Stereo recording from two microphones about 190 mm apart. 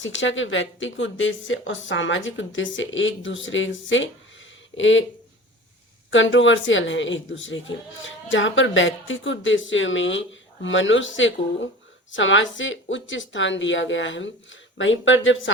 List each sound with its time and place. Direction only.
0.0 s a woman's voice: 80° left
6.1 s a woman's voice: 80° left